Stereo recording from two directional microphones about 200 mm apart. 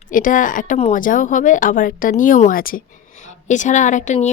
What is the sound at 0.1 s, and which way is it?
A woman's voice, 40° left (ahead or behind).